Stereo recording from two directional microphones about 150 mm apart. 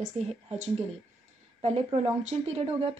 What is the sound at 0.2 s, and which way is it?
Speech, 45° right (ahead or behind).